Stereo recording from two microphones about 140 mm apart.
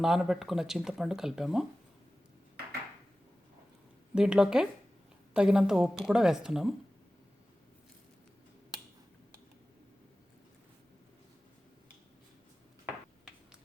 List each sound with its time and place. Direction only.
0.0 s speech: 5° right (ahead or behind)
4.1 s speech: 5° right (ahead or behind)